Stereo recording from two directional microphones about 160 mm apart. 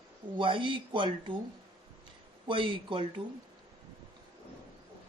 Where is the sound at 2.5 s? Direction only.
30° right (ahead or behind).